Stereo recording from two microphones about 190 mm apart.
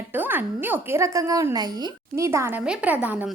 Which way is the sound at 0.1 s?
10° right (ahead or behind).